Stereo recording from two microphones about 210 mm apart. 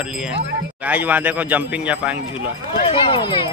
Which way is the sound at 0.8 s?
10° right (ahead or behind).